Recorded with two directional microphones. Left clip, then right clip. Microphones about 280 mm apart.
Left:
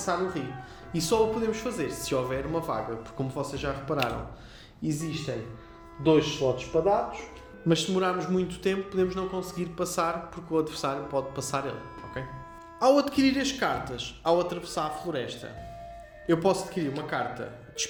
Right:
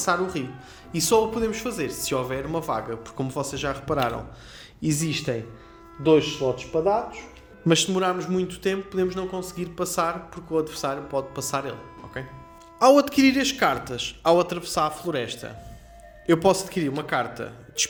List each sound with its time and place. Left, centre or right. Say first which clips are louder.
0.0 s speech: right 5 dB; right
4.8 s speech: right 6 dB; right
7.7 s speech: right 4 dB; centre